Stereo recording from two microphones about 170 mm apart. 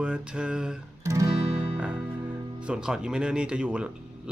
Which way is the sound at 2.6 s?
5° right (ahead or behind).